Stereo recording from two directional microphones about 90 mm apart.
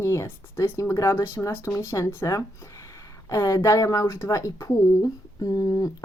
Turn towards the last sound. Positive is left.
turn(degrees=45)  # may be behind; listen again after turning